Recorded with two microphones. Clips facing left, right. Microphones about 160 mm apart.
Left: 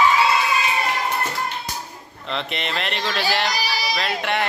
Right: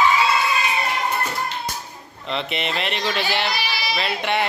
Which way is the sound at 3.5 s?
40° left (ahead or behind).